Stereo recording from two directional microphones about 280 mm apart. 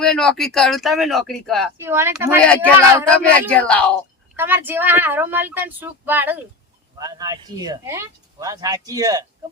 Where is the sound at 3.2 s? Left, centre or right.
Centre.